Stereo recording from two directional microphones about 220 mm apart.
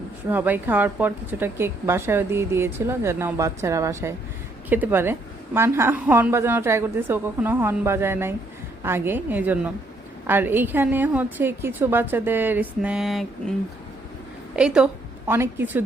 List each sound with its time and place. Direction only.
0.3 s a woman's voice: 10° right (ahead or behind)
14.5 s a woman's voice: 5° right (ahead or behind)